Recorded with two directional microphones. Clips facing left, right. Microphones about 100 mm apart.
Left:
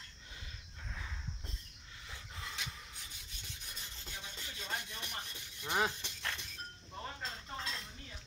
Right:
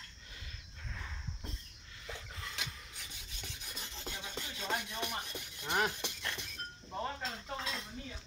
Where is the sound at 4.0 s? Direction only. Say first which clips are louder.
Right 6 dB; 75° right (ahead or behind).